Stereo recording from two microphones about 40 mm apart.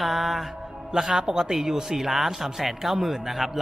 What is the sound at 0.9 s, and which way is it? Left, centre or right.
A man's voice, centre.